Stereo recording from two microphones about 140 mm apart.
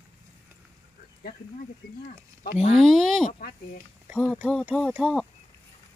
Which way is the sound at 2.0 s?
75° left (ahead or behind).